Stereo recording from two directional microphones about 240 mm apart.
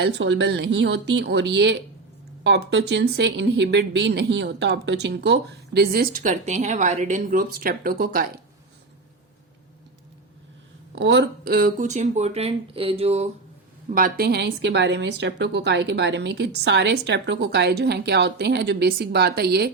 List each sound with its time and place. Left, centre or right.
0.0 s speech: right
10.9 s speech: right
13.9 s speech: right